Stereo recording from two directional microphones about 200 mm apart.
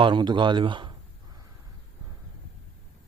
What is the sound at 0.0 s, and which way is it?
Speech, 25° right (ahead or behind).